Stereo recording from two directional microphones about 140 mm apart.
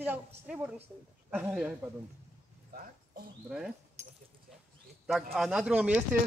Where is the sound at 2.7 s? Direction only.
90° right.